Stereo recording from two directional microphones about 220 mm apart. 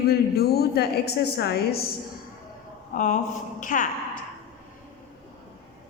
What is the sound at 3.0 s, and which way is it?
Speech, 35° left (ahead or behind).